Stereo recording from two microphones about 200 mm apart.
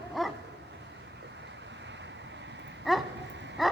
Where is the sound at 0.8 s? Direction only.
65° right (ahead or behind).